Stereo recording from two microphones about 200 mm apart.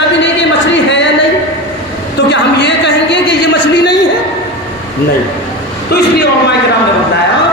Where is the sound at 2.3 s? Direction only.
60° left (ahead or behind).